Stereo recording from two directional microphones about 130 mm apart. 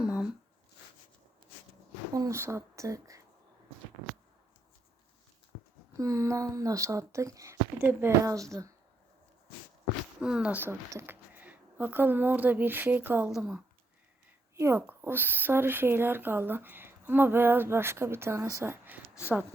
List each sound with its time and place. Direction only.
0.0 s a sound: 5° right (ahead or behind)
2.1 s speech: 25° right (ahead or behind)
6.0 s speech: 25° right (ahead or behind)
10.2 s speech: 10° right (ahead or behind)
13.3 s a woman's voice: 5° right (ahead or behind)
14.5 s speech: 20° right (ahead or behind)